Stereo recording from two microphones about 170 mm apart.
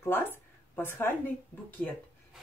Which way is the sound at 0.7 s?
15° left (ahead or behind).